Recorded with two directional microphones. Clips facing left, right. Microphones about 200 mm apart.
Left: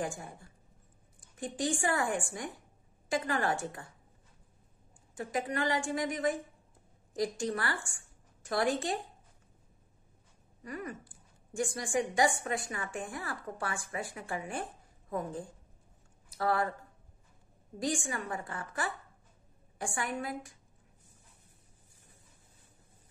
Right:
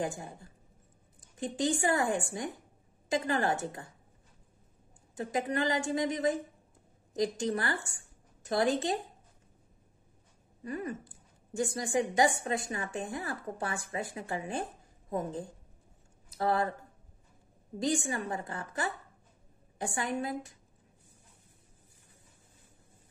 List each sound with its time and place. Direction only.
0.0 s a woman's voice: 20° right (ahead or behind)
5.1 s a woman's voice: 20° right (ahead or behind)
10.6 s a woman's voice: 25° right (ahead or behind)
17.7 s a woman's voice: 20° right (ahead or behind)